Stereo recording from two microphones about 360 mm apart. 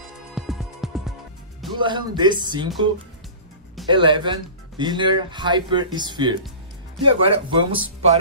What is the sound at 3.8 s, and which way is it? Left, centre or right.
Speech, centre.